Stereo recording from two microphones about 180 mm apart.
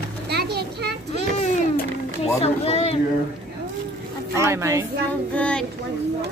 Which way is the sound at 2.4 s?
35° left (ahead or behind).